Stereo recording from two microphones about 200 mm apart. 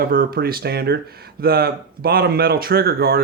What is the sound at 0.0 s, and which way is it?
Speech, 45° right (ahead or behind).